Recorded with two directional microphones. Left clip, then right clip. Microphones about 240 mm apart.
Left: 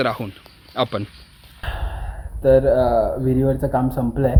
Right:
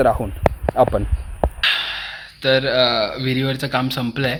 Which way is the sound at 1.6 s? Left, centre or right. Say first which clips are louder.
Right 12 dB; right.